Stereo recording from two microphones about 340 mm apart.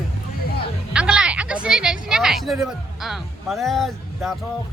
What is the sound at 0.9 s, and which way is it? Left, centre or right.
Speech, centre.